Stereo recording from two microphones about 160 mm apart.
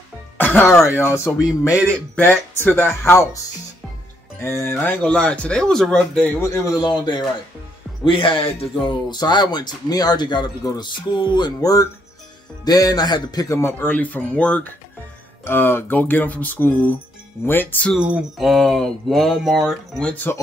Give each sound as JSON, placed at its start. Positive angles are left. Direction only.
{"t": 0.4, "sound": "speech", "side_deg": 10}
{"t": 4.4, "sound": "speech", "side_deg": 15}
{"t": 6.4, "sound": "speech", "side_deg": 20}
{"t": 17.9, "sound": "speech", "side_deg": -5}